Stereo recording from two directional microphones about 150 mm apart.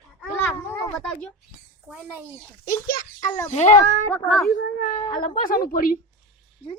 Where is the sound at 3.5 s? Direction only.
50° left (ahead or behind).